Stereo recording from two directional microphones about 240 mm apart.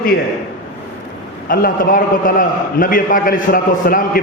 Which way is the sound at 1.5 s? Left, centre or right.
Left.